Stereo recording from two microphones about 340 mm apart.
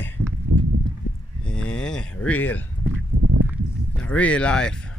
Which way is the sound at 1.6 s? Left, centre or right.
Centre.